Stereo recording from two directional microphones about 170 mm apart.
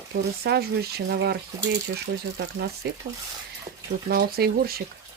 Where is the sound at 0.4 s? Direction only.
70° right (ahead or behind).